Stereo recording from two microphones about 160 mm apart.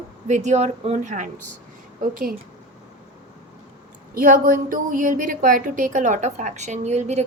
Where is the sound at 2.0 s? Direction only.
60° right (ahead or behind).